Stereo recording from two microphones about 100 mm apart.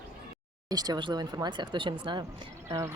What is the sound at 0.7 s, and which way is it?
Speech, 40° right (ahead or behind).